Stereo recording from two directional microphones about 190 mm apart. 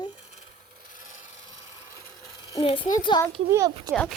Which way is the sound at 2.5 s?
25° left (ahead or behind).